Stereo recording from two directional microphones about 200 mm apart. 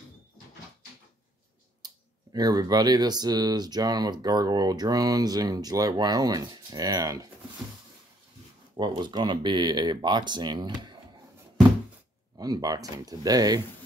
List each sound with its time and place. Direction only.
1.8 s clicking: 20° right (ahead or behind)
2.3 s speech: 20° right (ahead or behind)
8.7 s speech: 20° right (ahead or behind)
12.4 s speech: 20° right (ahead or behind)